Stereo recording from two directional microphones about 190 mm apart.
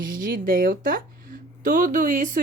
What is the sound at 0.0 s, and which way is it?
A woman's voice, 45° right (ahead or behind).